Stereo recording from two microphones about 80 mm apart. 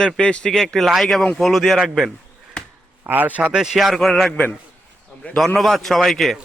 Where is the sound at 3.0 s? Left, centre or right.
Right.